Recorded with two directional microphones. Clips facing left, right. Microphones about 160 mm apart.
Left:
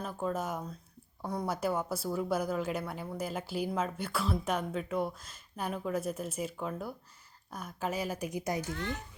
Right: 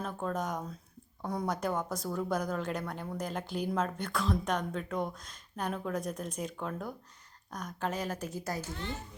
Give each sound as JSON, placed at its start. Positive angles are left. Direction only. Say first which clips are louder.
{"t": 0.0, "sound": "a woman's voice", "louder": "even", "side_deg": 5}
{"t": 8.7, "sound": "a child's voice", "louder": "left 2 dB", "side_deg": -20}